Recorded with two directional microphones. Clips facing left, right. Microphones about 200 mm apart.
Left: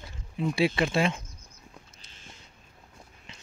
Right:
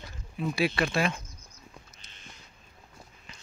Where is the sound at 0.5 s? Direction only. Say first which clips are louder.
Left 2 dB; 25° left (ahead or behind).